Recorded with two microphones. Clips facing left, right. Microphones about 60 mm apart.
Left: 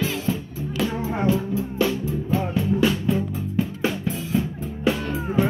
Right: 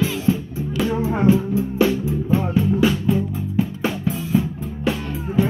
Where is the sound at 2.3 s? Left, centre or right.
Centre.